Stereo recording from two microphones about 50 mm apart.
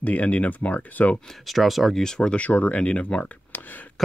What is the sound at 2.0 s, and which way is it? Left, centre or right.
Speech, centre.